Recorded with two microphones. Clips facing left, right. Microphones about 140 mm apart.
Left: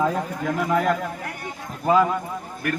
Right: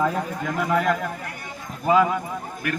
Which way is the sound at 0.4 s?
Centre (ahead or behind).